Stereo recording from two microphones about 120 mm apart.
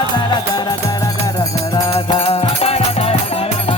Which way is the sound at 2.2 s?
55° left (ahead or behind).